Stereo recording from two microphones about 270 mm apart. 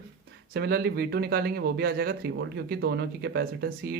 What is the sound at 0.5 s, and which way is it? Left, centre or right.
Speech, right.